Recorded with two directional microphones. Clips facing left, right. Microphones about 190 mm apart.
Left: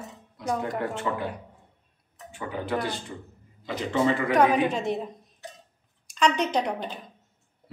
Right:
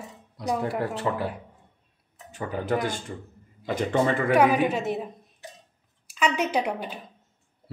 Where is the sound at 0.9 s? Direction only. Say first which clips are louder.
Right 2 dB; 35° right (ahead or behind).